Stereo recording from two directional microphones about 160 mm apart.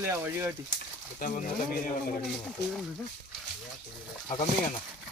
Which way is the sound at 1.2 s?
60° left (ahead or behind).